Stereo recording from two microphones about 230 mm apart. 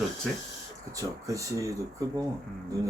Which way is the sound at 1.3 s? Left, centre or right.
Centre.